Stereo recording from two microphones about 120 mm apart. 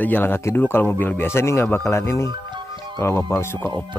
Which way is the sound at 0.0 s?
15° left (ahead or behind).